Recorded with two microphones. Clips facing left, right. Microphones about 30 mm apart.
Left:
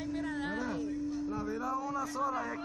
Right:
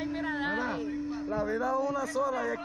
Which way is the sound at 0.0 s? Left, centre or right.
Right.